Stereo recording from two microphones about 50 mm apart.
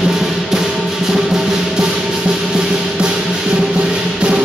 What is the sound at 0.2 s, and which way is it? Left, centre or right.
Music, centre.